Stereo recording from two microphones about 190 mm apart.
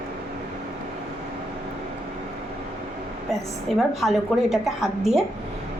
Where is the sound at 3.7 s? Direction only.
Centre (ahead or behind).